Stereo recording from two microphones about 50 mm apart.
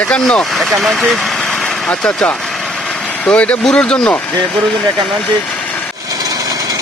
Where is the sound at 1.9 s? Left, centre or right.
Left.